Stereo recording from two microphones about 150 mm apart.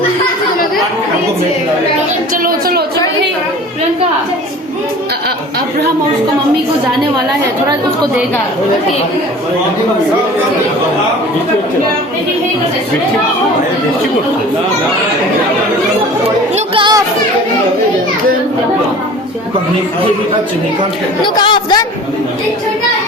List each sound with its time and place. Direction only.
2.3 s a sound: 70° right (ahead or behind)
16.7 s children playing: 30° right (ahead or behind)
21.2 s speech: 30° left (ahead or behind)